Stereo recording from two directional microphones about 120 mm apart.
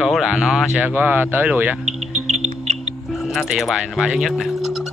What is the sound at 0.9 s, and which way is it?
Speech, 15° right (ahead or behind).